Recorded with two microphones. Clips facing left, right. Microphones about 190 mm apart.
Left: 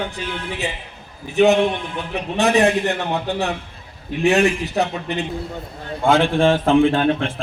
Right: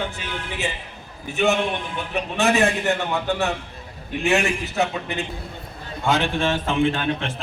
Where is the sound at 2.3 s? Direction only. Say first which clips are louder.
Left 4 dB; 35° left (ahead or behind).